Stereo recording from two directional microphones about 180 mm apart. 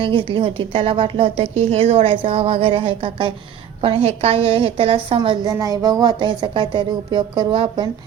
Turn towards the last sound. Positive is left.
turn(degrees=-30)  # may be behind; listen again after turning